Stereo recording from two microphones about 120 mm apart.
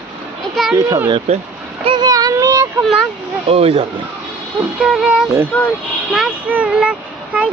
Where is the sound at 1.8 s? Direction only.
35° right (ahead or behind).